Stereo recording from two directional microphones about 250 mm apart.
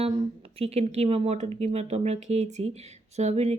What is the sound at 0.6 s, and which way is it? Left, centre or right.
A woman's voice, right.